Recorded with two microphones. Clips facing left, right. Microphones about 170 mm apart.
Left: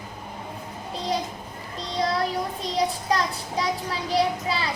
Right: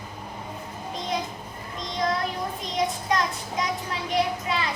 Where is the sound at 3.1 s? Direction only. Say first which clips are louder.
Left 1 dB; 35° left (ahead or behind).